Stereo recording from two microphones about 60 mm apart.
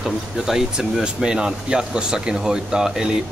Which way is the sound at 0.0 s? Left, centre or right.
Centre.